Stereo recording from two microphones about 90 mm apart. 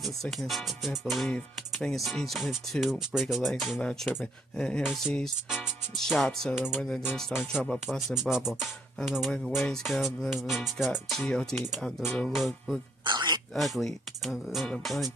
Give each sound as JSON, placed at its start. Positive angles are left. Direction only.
{"t": 0.0, "sound": "speech", "side_deg": 0}
{"t": 8.1, "sound": "speech", "side_deg": -5}
{"t": 13.0, "sound": "a sound", "side_deg": -55}
{"t": 13.6, "sound": "speech", "side_deg": 0}